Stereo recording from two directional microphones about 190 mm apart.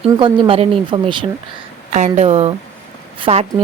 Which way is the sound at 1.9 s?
35° right (ahead or behind).